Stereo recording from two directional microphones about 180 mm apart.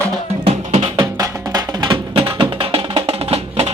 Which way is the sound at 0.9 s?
20° right (ahead or behind).